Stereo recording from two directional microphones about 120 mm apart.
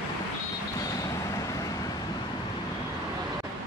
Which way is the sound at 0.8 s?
30° left (ahead or behind).